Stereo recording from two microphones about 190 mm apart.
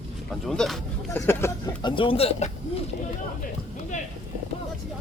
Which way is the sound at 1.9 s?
30° left (ahead or behind).